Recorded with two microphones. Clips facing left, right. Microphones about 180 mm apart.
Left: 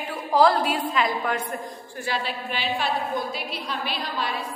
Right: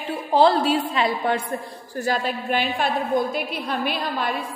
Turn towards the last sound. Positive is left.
turn(degrees=-55)  # may be behind; listen again after turning